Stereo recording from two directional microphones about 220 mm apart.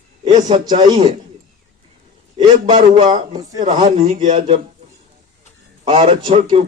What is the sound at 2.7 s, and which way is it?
Speech, 25° right (ahead or behind).